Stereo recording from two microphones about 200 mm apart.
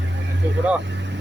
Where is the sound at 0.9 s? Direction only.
65° right (ahead or behind).